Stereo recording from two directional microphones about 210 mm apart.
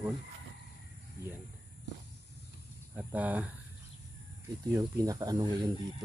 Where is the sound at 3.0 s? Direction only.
10° right (ahead or behind).